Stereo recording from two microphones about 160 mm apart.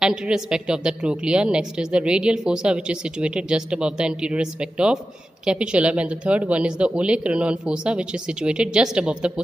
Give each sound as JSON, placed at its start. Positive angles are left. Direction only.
{"t": 0.0, "sound": "a woman's voice", "side_deg": -5}